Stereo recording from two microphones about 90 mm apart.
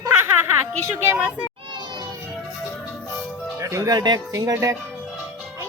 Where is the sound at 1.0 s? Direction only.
25° right (ahead or behind).